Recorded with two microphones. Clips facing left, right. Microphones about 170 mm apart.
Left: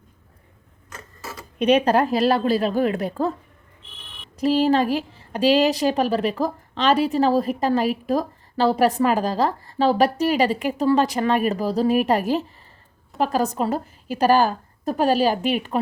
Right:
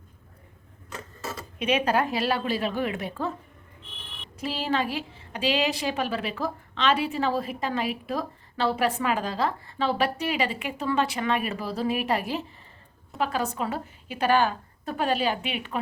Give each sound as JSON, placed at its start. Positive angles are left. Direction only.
{"t": 1.5, "sound": "a woman's voice", "side_deg": 35}
{"t": 4.4, "sound": "a woman's voice", "side_deg": 40}